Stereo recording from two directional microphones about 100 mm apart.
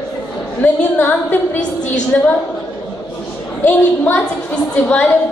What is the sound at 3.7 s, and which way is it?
Speech, 15° left (ahead or behind).